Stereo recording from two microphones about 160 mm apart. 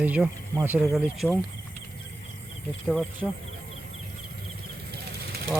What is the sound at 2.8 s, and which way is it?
Speech, centre (ahead or behind).